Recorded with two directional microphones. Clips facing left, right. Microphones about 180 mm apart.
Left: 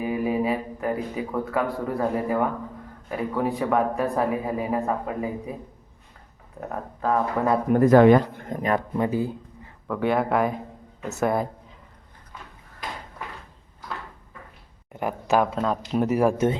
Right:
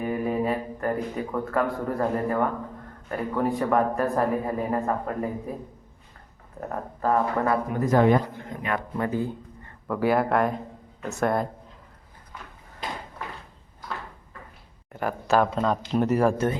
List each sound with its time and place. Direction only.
0.0 s speech: 5° left (ahead or behind)
6.6 s speech: centre (ahead or behind)
7.7 s speech: 65° left (ahead or behind); by 8.2 s 80° left
8.4 s speech: 45° left (ahead or behind)
9.0 s a sound: 10° left (ahead or behind)
9.8 s speech: 5° right (ahead or behind)
14.9 s speech: 15° left (ahead or behind)